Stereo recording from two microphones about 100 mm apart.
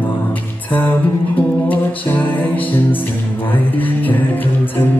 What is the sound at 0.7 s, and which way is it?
Music, 15° left (ahead or behind).